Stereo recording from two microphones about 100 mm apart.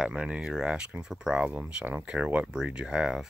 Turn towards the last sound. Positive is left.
turn(degrees=-5)  # may be behind; listen again after turning